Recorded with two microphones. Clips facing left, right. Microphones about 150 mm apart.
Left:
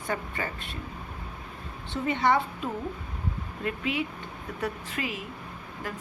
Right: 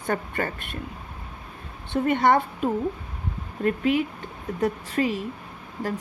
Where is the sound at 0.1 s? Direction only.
55° right (ahead or behind).